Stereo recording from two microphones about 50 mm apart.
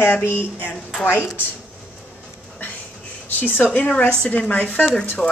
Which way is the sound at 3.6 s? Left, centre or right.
Left.